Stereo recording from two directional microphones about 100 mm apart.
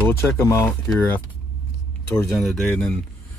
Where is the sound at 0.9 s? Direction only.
20° left (ahead or behind).